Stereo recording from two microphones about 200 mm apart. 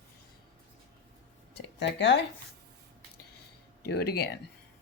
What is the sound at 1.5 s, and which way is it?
Speech, 60° left (ahead or behind).